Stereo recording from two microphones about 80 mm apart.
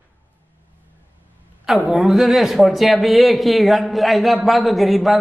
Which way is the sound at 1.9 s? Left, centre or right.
Centre.